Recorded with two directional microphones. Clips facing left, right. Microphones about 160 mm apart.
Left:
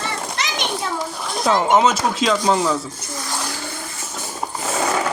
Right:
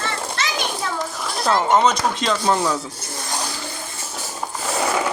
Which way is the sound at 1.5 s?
10° left (ahead or behind).